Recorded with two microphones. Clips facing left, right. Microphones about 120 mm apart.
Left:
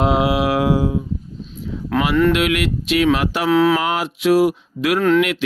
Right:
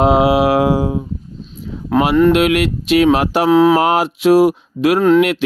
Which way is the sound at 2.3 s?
45° right (ahead or behind).